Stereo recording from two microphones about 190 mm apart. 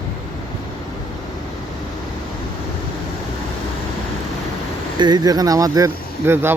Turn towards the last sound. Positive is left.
turn(degrees=-10)  # may be behind; listen again after turning